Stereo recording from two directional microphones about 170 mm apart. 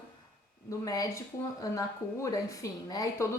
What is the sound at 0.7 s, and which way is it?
A woman's voice, 20° left (ahead or behind).